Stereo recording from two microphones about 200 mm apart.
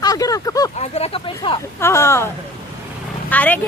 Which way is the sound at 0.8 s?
30° left (ahead or behind).